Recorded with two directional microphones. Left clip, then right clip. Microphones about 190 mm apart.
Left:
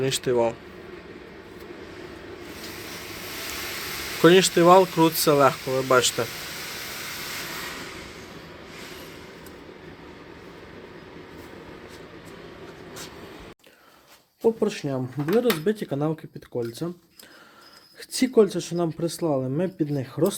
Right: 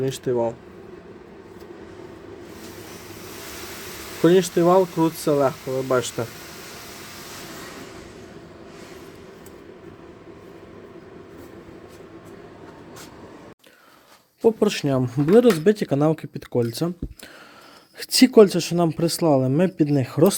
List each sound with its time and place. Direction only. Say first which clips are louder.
0.0 s speech: left 1 dB; 15° right (ahead or behind)
4.2 s speech: left 1 dB; 15° right (ahead or behind)
5.4 s speech: left 2 dB; centre (ahead or behind)
6.0 s speech: left 4 dB; 20° right (ahead or behind)
14.4 s speech: right 4 dB; 50° right (ahead or behind)
18.0 s speech: right 6 dB; 45° right (ahead or behind)